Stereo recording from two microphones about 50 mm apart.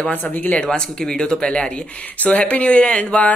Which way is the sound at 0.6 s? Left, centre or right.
Centre.